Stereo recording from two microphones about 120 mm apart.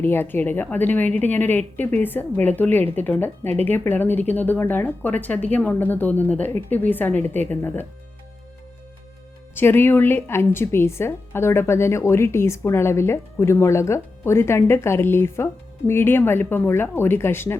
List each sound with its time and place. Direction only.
0.0 s a woman's voice: 15° left (ahead or behind)
9.6 s a woman's voice: 15° left (ahead or behind)